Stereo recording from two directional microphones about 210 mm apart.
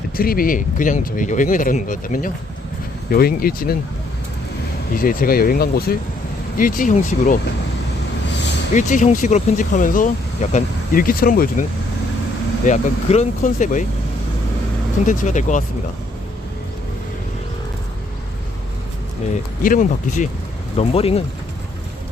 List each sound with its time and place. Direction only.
0.2 s speech: 45° left (ahead or behind)
4.9 s speech: 45° left (ahead or behind)
8.7 s speech: 35° left (ahead or behind)
12.6 s speech: 35° left (ahead or behind)
15.0 s speech: 35° left (ahead or behind)
19.6 s speech: 40° left (ahead or behind)